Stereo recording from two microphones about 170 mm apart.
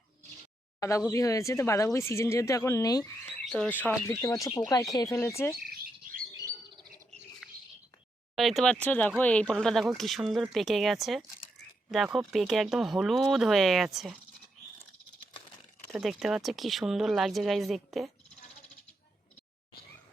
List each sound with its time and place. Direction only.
0.8 s speech: 20° left (ahead or behind)
3.4 s speech: 5° left (ahead or behind)
5.5 s bird: 60° right (ahead or behind)
7.4 s a sound: centre (ahead or behind)
8.4 s speech: centre (ahead or behind)
16.0 s speech: centre (ahead or behind)